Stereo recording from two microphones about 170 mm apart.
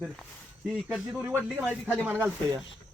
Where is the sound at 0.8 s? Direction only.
Centre (ahead or behind).